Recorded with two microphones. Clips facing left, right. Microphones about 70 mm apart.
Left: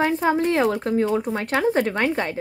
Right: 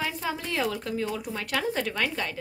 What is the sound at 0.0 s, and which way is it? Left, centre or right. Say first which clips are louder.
A woman's voice: left 11 dB; left.